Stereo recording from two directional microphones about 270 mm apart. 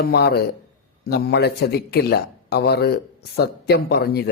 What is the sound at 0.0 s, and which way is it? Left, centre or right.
A man's voice, left.